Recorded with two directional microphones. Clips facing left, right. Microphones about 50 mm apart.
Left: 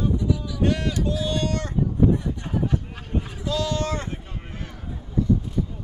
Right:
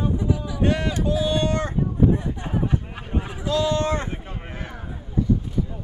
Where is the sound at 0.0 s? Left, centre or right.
Right.